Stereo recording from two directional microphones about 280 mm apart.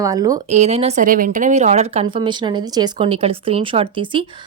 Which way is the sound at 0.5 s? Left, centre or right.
Right.